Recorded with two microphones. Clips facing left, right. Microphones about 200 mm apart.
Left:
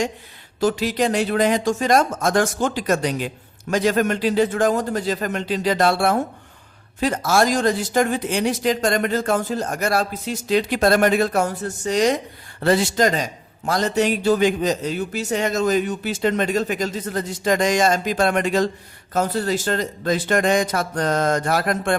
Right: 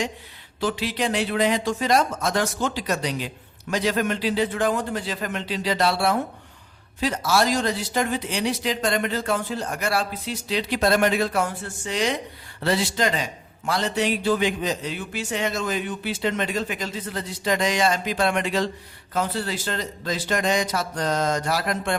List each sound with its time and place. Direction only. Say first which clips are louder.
0.6 s speech: left 5 dB; 45° left (ahead or behind)